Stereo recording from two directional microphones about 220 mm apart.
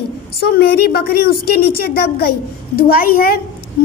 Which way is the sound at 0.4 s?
45° left (ahead or behind).